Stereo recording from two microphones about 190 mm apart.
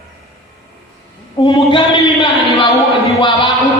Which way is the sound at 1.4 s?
25° left (ahead or behind).